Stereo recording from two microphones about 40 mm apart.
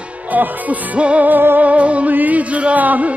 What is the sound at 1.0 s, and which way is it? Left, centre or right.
Music, right.